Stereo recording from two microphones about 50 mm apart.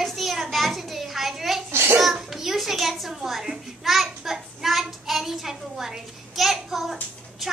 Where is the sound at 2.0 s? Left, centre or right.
Centre.